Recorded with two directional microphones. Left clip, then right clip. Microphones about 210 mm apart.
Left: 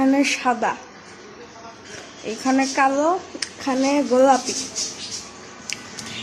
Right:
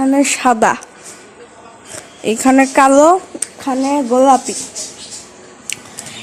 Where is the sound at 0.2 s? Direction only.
35° right (ahead or behind).